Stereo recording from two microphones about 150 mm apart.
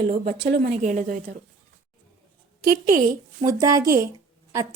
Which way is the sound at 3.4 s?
20° right (ahead or behind).